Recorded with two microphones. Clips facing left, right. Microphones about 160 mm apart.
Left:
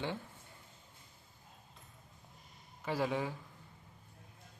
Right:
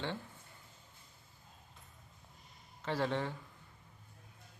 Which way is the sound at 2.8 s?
10° left (ahead or behind).